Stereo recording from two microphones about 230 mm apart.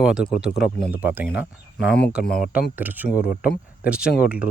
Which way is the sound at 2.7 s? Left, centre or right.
Centre.